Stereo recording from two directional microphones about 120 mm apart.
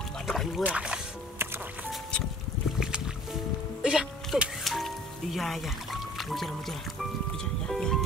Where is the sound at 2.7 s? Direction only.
5° right (ahead or behind).